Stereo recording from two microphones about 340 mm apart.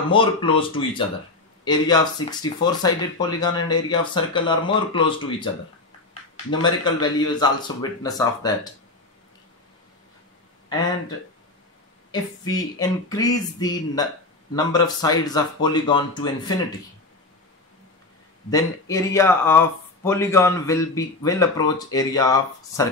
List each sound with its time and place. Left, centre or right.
0.1 s speech: centre
6.6 s speech: centre
12.1 s speech: centre
18.5 s speech: centre